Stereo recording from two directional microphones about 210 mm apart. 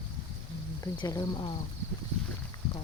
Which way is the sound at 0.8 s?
20° left (ahead or behind).